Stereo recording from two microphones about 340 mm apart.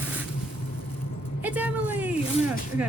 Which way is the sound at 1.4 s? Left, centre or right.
Centre.